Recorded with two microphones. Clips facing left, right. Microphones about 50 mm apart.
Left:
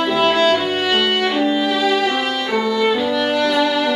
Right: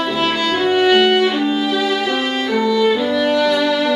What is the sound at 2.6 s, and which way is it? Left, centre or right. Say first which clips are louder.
Violin: right 3 dB; centre.